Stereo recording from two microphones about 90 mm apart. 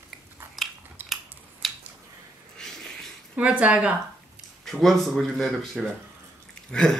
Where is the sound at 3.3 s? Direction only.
15° right (ahead or behind).